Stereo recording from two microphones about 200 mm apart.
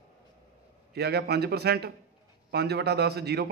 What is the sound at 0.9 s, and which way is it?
A man's voice, 55° right (ahead or behind).